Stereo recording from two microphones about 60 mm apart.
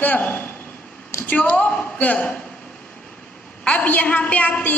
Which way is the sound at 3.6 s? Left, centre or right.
Left.